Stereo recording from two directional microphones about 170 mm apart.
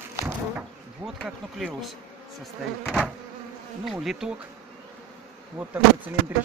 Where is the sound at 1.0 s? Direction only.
Centre (ahead or behind).